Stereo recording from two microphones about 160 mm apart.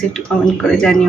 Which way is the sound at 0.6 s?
5° left (ahead or behind).